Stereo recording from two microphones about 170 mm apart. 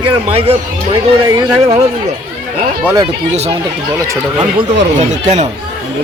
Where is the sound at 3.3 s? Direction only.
40° right (ahead or behind).